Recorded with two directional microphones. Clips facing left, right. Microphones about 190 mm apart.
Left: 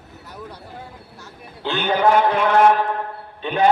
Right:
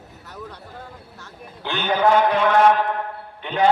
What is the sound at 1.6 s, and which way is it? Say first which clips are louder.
Speech: left 1 dB; 20° left (ahead or behind).